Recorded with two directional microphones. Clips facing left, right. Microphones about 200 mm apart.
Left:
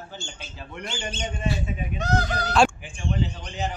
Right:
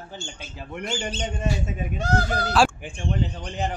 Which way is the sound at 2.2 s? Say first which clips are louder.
Left 1 dB; 5° right (ahead or behind).